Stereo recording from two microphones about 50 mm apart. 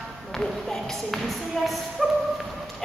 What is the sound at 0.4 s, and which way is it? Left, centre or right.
Speech, centre.